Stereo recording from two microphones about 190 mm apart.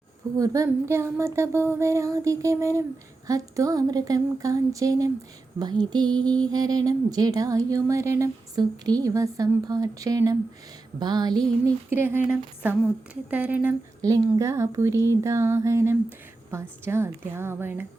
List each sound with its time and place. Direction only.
0.3 s speech: 15° right (ahead or behind)